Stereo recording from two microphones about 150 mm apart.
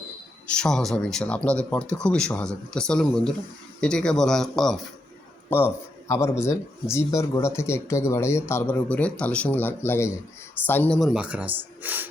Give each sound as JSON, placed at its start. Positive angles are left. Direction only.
{"t": 0.5, "sound": "speech", "side_deg": 5}
{"t": 5.5, "sound": "speech", "side_deg": 15}